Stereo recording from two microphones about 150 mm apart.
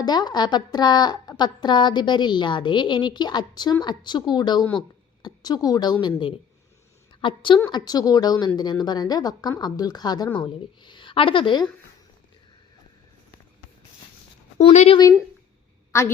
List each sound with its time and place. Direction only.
0.0 s a woman's voice: 30° left (ahead or behind)
14.6 s speech: 45° left (ahead or behind)
15.9 s a woman's voice: 20° left (ahead or behind)